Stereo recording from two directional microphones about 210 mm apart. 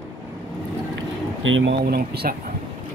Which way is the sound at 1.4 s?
65° right (ahead or behind).